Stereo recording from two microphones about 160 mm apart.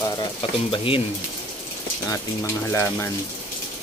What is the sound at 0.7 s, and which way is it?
Stir, 35° left (ahead or behind).